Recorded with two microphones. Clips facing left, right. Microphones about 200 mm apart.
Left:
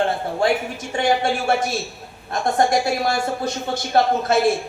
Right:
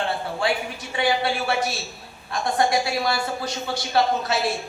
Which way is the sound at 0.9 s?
45° left (ahead or behind).